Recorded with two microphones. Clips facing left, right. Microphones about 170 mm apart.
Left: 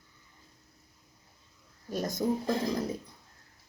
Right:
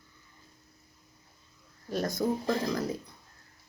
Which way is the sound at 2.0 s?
20° left (ahead or behind).